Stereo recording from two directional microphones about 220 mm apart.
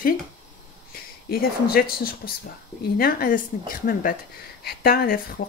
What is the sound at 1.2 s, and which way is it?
A woman's voice, 45° left (ahead or behind).